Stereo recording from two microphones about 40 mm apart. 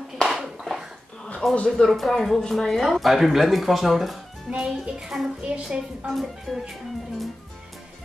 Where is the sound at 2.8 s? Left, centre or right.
Centre.